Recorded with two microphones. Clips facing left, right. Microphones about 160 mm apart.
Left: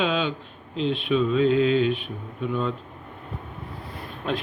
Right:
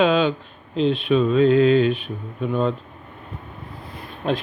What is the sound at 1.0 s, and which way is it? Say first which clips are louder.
Speech: right 3 dB; 45° right (ahead or behind).